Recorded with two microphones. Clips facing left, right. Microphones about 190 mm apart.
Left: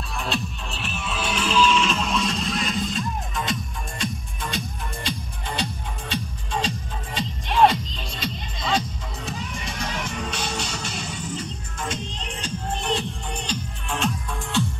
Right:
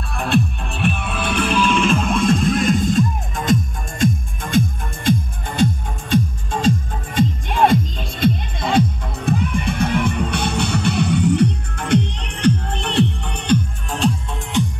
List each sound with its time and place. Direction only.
0.1 s music: 55° right (ahead or behind)
13.8 s music: 35° right (ahead or behind)
14.3 s music: 15° right (ahead or behind)